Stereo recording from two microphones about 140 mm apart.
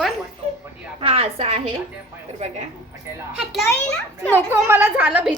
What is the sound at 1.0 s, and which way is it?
A woman's voice, 45° right (ahead or behind).